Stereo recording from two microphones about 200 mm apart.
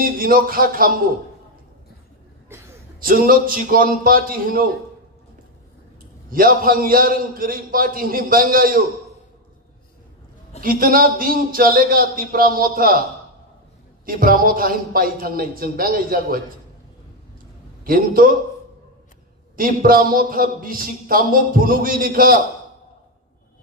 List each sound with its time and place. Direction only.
0.0 s a man's voice: 45° right (ahead or behind)
2.5 s a sound: 10° right (ahead or behind)
3.0 s a man's voice: 45° right (ahead or behind)
6.3 s a man's voice: 45° right (ahead or behind)
10.6 s a man's voice: 45° right (ahead or behind)
14.0 s a man's voice: 45° right (ahead or behind)
17.8 s a man's voice: 45° right (ahead or behind)
19.5 s a man's voice: 45° right (ahead or behind)